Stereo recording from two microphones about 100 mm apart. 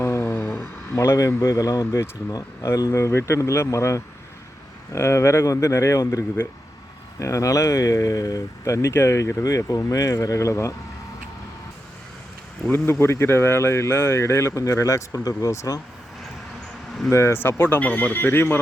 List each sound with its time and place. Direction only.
0.0 s a sound: 25° left (ahead or behind)
0.9 s speech: 30° left (ahead or behind)
12.7 s speech: 25° left (ahead or behind)
17.1 s speech: 25° left (ahead or behind)